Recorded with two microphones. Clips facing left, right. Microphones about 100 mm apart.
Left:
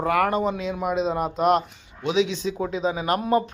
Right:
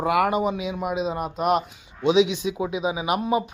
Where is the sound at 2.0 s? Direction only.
20° right (ahead or behind).